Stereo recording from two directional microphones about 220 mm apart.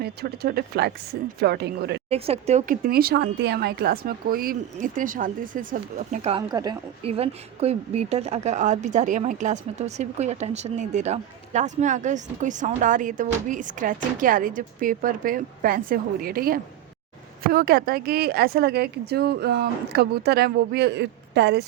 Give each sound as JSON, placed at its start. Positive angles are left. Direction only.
{"t": 0.0, "sound": "speech", "side_deg": -45}
{"t": 2.0, "sound": "speech", "side_deg": -25}
{"t": 2.8, "sound": "speech", "side_deg": -45}
{"t": 6.5, "sound": "speech", "side_deg": -20}